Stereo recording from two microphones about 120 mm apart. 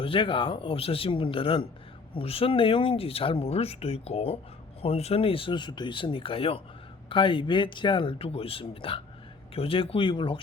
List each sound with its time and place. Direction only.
0.0 s speech: 45° left (ahead or behind)